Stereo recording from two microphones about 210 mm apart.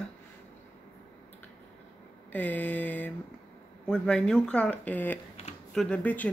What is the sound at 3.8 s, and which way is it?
Speech, 5° left (ahead or behind).